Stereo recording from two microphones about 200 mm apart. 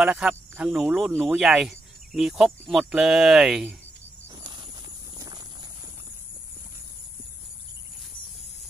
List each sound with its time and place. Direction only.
0.0 s speech: 5° right (ahead or behind)
4.4 s a sound: 20° right (ahead or behind)
5.1 s clip-clop: 20° right (ahead or behind)